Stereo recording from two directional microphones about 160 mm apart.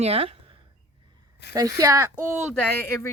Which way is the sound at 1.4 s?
90° left.